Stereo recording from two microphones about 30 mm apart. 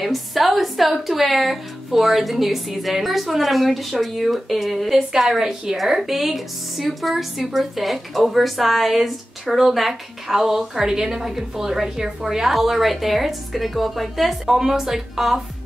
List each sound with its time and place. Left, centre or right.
0.0 s speech: centre
5.4 s a woman's voice: centre
14.4 s a woman's voice: centre